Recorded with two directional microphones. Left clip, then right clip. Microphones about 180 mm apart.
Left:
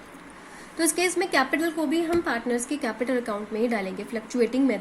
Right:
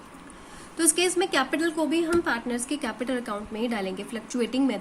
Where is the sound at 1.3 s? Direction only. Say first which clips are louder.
Left 2 dB; 5° left (ahead or behind).